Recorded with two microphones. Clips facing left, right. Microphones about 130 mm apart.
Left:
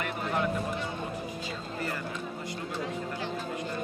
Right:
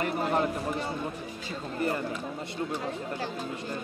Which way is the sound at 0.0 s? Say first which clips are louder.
Right 4 dB; 35° right (ahead or behind).